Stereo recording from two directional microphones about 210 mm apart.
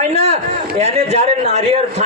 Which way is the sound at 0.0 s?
30° right (ahead or behind).